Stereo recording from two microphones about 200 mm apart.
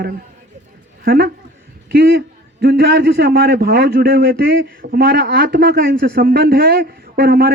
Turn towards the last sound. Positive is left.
turn(degrees=-50)  # may be behind; listen again after turning